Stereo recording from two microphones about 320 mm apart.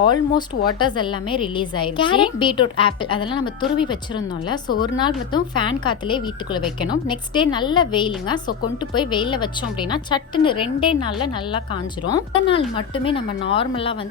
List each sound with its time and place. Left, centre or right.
0.3 s speech: centre